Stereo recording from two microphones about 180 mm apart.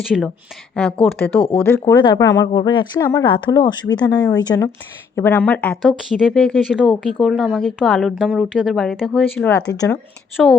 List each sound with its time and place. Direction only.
0.0 s speech: centre (ahead or behind)
1.0 s speech: 10° left (ahead or behind)
1.9 s a woman's voice: 20° left (ahead or behind)
5.1 s speech: 10° left (ahead or behind)